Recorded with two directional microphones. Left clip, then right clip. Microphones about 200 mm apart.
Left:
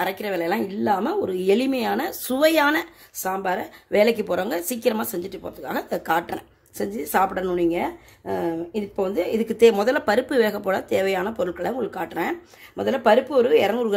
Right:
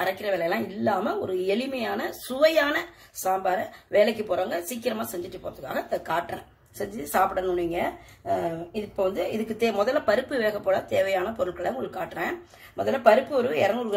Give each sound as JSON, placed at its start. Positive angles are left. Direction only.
{"t": 0.0, "sound": "a woman's voice", "side_deg": 55}